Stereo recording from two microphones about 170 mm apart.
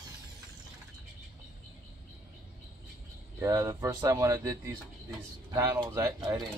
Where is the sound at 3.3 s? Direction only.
20° right (ahead or behind).